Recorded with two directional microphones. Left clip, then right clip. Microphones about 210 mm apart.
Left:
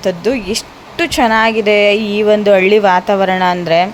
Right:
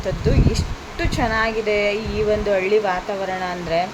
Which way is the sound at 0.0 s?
45° left (ahead or behind).